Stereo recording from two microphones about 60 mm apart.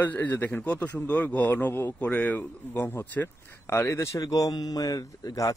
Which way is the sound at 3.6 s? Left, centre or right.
Left.